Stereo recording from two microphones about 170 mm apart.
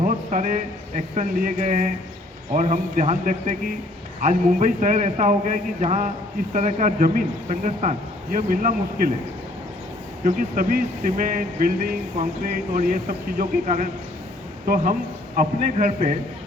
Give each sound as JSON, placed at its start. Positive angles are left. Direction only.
{"t": 0.0, "sound": "speech", "side_deg": -50}
{"t": 10.2, "sound": "speech", "side_deg": -55}
{"t": 15.4, "sound": "speech", "side_deg": -45}